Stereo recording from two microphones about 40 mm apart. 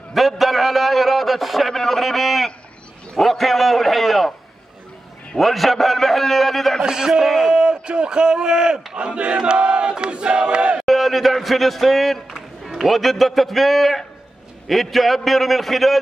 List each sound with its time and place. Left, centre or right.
0.1 s a man's voice: centre
5.4 s a man's voice: centre
6.8 s a man's voice: centre
7.2 s a man's voice: centre
7.4 s a man's voice: right
8.9 s battle cry: right
10.8 s a man's voice: centre